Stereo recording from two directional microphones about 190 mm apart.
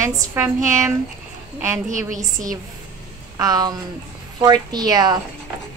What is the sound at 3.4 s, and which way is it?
A woman's voice, 20° right (ahead or behind).